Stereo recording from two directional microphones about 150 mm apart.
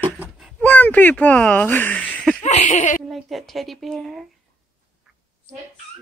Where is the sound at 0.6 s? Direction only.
10° left (ahead or behind).